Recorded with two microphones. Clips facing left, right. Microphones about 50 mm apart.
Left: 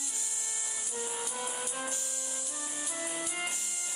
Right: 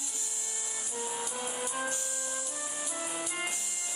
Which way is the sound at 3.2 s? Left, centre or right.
Centre.